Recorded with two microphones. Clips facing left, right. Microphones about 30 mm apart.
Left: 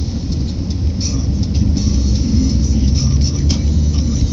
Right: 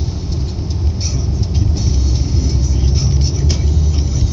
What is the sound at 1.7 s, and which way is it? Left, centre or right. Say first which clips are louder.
Vehicle: left 3 dB; left.